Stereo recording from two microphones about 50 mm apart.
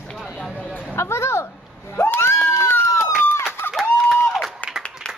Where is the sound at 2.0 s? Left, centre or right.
Left.